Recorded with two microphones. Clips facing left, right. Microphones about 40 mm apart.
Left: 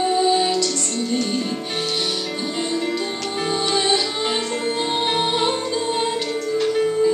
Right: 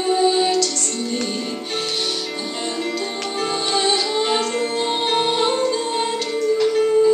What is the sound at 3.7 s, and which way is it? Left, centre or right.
Music, centre.